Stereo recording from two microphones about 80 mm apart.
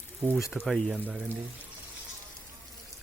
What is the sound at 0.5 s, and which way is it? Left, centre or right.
Speech, centre.